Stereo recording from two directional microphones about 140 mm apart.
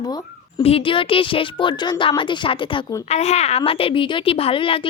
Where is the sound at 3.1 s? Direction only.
50° left (ahead or behind).